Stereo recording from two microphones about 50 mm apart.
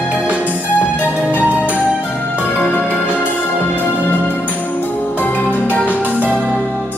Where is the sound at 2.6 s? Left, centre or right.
Left.